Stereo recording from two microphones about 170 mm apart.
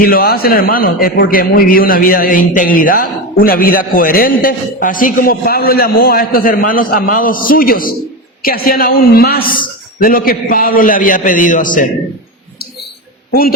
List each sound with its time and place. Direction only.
0.0 s a man's voice: 60° left (ahead or behind)